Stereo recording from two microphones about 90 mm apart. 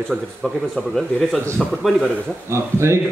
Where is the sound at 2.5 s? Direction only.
30° right (ahead or behind).